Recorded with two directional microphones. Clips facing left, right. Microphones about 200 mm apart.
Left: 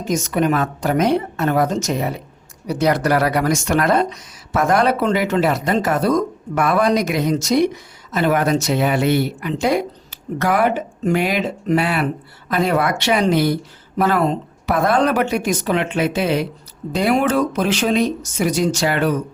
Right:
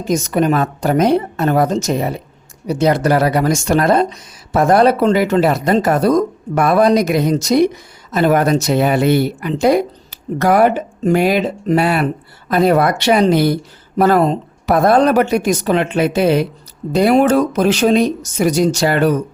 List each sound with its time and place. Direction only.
0.1 s speech: 35° right (ahead or behind)